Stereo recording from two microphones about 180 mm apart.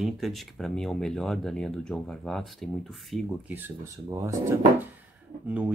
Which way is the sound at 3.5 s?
15° right (ahead or behind).